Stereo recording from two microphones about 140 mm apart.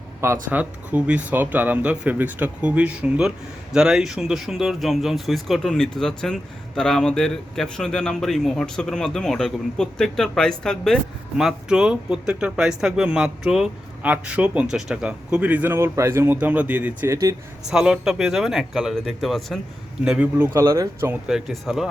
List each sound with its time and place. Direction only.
0.5 s speech: 10° right (ahead or behind)
17.7 s speech: 5° right (ahead or behind)
20.1 s speech: 10° right (ahead or behind)
21.1 s speech: 5° right (ahead or behind)